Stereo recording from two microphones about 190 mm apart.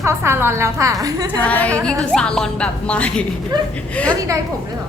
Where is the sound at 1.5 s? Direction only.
10° left (ahead or behind).